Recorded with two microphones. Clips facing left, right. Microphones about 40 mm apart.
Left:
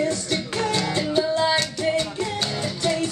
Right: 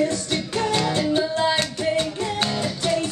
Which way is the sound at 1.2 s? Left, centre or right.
Centre.